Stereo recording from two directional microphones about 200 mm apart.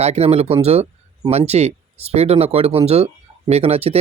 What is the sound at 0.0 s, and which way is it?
A man's voice, 30° right (ahead or behind).